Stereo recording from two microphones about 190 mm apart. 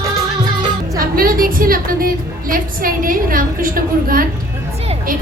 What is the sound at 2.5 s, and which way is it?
A woman's voice, 50° right (ahead or behind).